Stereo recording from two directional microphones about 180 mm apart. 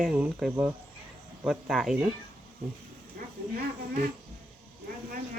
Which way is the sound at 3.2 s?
55° right (ahead or behind).